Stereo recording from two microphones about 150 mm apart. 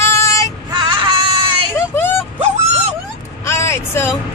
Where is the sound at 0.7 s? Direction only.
30° right (ahead or behind).